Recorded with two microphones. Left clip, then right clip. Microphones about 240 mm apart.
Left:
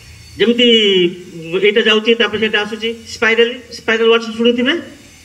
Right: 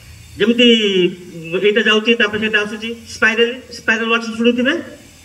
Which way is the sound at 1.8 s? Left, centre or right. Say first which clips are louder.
Left 1 dB; left.